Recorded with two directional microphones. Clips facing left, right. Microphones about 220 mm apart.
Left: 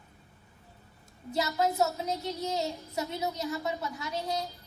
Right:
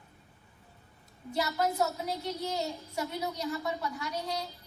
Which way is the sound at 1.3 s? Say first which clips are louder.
Left 2 dB; 20° left (ahead or behind).